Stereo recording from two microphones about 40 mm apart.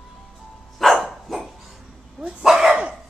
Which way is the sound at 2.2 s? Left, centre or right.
Right.